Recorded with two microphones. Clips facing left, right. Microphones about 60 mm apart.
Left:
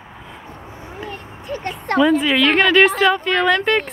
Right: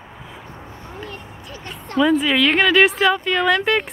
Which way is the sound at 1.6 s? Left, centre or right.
Left.